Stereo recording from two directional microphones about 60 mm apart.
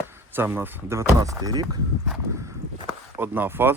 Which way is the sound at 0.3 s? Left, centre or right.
Right.